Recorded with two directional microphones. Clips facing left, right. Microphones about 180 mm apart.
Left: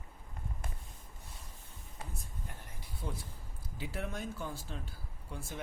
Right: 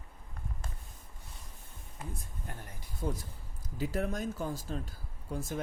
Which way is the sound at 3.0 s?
40° right (ahead or behind).